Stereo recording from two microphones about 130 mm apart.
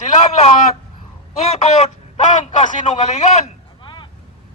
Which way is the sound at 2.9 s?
60° left (ahead or behind).